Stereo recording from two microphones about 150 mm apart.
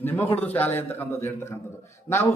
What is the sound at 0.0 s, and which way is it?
A man's voice, 15° left (ahead or behind).